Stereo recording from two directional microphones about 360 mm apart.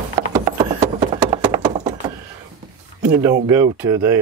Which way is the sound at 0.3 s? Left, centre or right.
Centre.